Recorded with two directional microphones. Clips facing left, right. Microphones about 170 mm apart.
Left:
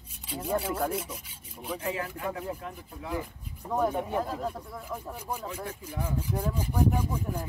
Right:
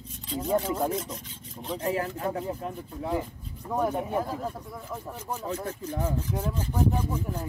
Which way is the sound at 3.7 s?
10° right (ahead or behind).